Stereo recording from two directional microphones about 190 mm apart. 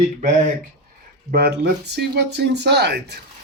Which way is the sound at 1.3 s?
55° right (ahead or behind).